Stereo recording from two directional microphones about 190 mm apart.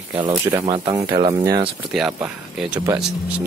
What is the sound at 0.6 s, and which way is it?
Speech, 25° right (ahead or behind).